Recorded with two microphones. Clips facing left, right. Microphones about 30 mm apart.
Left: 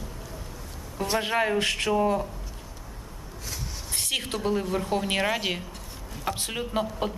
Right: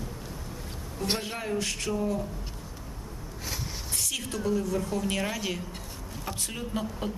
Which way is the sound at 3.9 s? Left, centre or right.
Left.